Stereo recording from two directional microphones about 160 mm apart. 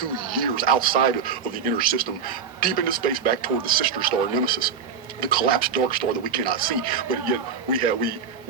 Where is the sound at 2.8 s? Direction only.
65° right (ahead or behind).